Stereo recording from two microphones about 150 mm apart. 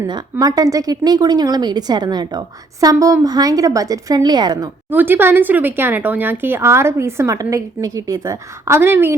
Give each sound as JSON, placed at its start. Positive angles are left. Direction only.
{"t": 0.1, "sound": "speech", "side_deg": -25}
{"t": 4.9, "sound": "speech", "side_deg": -15}